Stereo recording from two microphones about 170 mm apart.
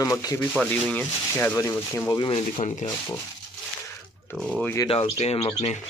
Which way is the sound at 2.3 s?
40° left (ahead or behind).